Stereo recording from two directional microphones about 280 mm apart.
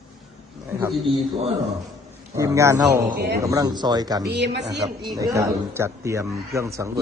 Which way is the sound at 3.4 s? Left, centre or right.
Centre.